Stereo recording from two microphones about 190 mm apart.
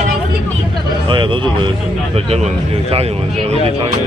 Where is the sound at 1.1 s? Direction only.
25° right (ahead or behind).